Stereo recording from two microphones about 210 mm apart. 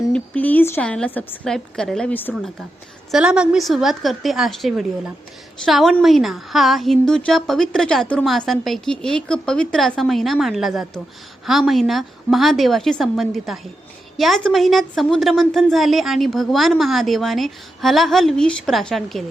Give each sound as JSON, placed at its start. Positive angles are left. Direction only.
{"t": 0.1, "sound": "a woman's voice", "side_deg": 5}